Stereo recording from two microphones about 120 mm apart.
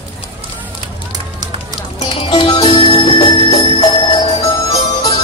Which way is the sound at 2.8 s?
40° left (ahead or behind).